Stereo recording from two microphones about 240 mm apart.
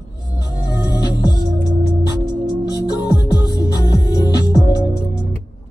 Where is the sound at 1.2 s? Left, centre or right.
Centre.